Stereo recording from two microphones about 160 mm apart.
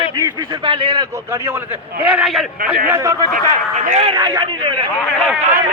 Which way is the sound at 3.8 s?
45° right (ahead or behind).